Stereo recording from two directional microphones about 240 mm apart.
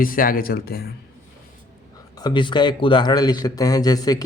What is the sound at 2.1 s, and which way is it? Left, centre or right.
A man's voice, centre.